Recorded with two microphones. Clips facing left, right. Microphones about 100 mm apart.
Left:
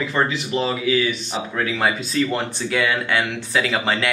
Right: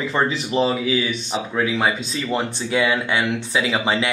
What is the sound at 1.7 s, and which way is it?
Speech, centre (ahead or behind).